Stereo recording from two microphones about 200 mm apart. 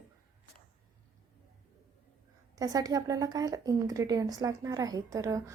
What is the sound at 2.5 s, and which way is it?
Speech, 20° right (ahead or behind).